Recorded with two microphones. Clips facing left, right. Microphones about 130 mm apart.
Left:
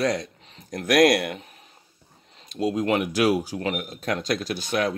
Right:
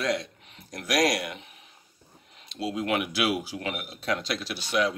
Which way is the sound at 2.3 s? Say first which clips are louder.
Left 6 dB; 45° left (ahead or behind).